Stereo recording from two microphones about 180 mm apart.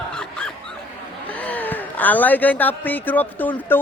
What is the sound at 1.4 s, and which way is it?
A man's voice, 10° left (ahead or behind).